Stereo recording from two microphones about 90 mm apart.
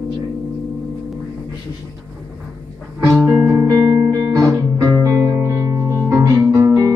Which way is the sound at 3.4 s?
20° right (ahead or behind).